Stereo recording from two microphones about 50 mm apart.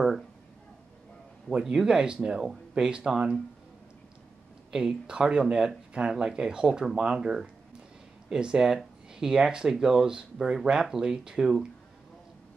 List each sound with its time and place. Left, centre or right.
1.5 s speech: centre
4.6 s speech: centre